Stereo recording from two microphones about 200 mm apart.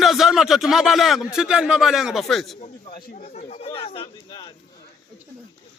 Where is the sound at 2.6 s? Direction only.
30° left (ahead or behind).